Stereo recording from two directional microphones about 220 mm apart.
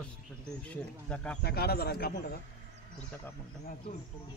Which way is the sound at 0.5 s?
5° left (ahead or behind).